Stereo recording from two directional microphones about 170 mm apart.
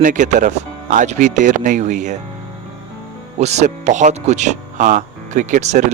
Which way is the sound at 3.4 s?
40° right (ahead or behind).